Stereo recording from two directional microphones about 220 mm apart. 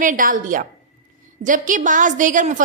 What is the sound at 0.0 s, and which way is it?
A woman's voice, 35° right (ahead or behind).